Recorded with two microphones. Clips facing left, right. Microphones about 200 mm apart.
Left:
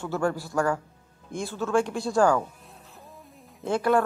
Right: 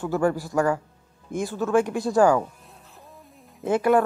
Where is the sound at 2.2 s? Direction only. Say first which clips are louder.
Right 3 dB; 5° right (ahead or behind).